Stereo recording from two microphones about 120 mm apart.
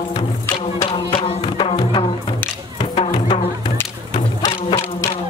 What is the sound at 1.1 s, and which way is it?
Music, 45° left (ahead or behind).